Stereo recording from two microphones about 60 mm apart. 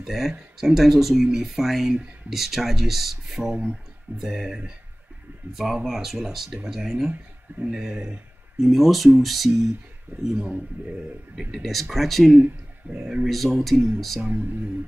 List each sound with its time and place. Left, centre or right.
0.0 s speech: centre
8.5 s speech: centre
10.3 s speech: centre
11.5 s speech: centre
12.9 s speech: right
13.3 s speech: centre